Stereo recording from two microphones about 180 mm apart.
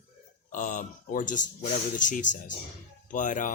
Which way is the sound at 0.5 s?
45° left (ahead or behind).